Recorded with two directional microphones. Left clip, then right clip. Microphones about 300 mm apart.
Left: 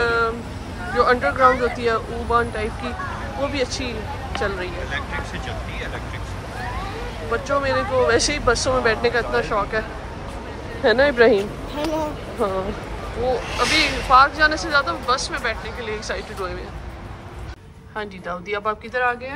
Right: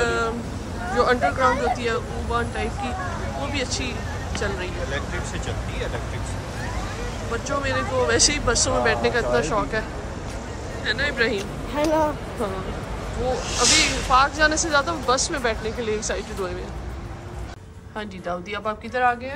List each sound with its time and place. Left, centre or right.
0.0 s cat: centre
0.9 s speech: centre
7.4 s speech: centre
10.8 s speech: centre
13.5 s speech: centre
13.7 s speech: centre
18.5 s speech: centre